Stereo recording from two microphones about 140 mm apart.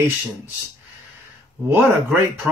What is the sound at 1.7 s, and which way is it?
Speech, 15° right (ahead or behind).